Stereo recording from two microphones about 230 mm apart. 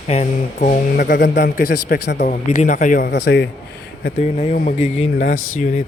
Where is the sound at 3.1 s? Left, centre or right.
Left.